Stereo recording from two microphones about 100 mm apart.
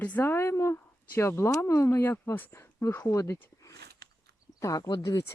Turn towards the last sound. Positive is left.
turn(degrees=40)  # may be behind; listen again after turning